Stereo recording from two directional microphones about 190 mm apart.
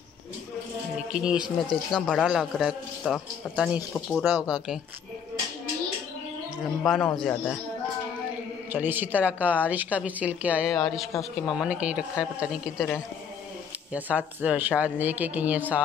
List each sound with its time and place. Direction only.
1.1 s speech: 5° right (ahead or behind)
1.4 s speech: 25° left (ahead or behind)
1.9 s speech: 5° left (ahead or behind)
6.8 s speech: 5° left (ahead or behind)
8.7 s a woman's voice: 10° right (ahead or behind)
13.9 s a woman's voice: 10° right (ahead or behind)